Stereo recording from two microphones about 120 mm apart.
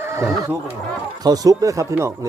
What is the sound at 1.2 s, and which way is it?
Speech, 30° right (ahead or behind).